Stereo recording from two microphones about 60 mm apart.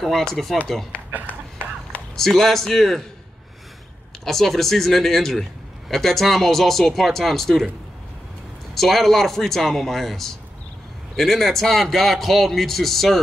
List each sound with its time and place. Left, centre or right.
0.0 s a man's voice: centre
1.2 s a sound: left
2.1 s a man's voice: centre
4.2 s a man's voice: centre
8.7 s a man's voice: centre